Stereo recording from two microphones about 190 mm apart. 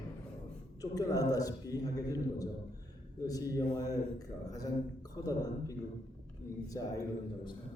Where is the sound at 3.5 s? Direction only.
20° left (ahead or behind).